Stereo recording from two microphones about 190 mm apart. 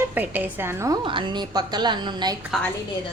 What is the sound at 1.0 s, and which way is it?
A woman's voice, 25° right (ahead or behind).